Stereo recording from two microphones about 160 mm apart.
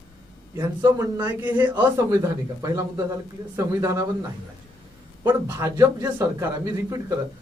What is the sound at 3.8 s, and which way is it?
Speech, 20° right (ahead or behind).